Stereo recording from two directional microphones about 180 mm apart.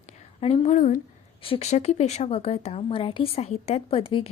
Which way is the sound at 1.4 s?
35° left (ahead or behind).